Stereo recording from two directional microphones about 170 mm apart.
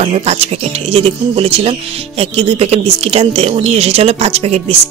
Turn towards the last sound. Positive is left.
turn(degrees=-40)  # may be behind; listen again after turning